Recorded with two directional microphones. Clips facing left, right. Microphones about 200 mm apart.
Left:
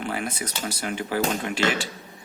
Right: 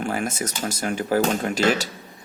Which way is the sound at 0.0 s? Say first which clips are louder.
Right 4 dB; 45° right (ahead or behind).